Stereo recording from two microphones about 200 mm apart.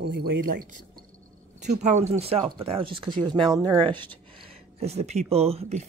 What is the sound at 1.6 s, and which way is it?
Speech, 35° right (ahead or behind).